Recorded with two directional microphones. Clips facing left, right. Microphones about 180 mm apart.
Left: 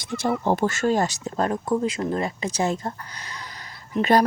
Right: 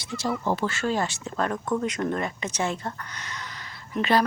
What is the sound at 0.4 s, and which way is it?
Speech, 50° left (ahead or behind).